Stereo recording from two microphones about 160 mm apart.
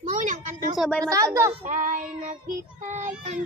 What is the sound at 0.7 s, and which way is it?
Speech, centre (ahead or behind).